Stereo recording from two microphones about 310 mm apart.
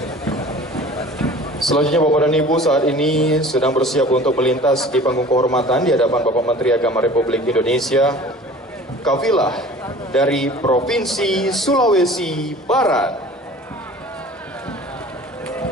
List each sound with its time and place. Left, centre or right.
0.7 s a sound: centre
2.1 s a man's voice: centre
6.2 s speech: centre
6.6 s a man's voice: centre
9.2 s a man's voice: centre
10.6 s a man's voice: centre
10.9 s a man's voice: centre